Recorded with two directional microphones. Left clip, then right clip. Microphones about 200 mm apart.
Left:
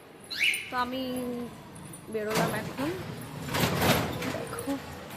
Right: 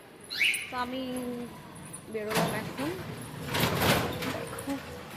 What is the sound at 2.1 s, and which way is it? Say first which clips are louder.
Speech: left 1 dB; 15° left (ahead or behind).